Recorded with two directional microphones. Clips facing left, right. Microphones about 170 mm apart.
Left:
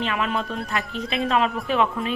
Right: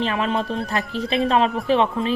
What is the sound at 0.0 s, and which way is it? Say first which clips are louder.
Speech: right 3 dB; 30° right (ahead or behind).